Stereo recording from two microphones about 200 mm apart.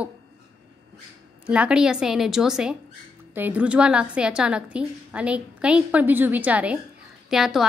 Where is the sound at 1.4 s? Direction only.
5° right (ahead or behind).